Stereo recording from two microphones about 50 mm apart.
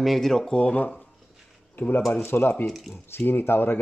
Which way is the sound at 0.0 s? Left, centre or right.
Centre.